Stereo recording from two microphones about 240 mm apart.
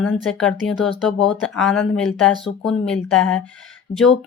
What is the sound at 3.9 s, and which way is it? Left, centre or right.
Speech, left.